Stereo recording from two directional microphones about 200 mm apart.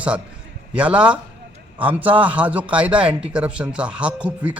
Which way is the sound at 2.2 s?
5° right (ahead or behind).